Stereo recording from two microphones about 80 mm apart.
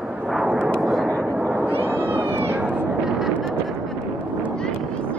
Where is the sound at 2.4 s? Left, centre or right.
Right.